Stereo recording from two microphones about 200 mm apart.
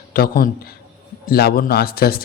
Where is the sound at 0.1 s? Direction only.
45° left (ahead or behind).